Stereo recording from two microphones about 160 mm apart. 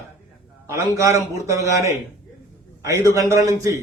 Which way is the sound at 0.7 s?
20° right (ahead or behind).